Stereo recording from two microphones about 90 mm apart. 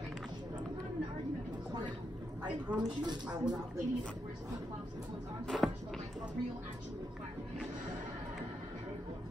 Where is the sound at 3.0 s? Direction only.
55° right (ahead or behind).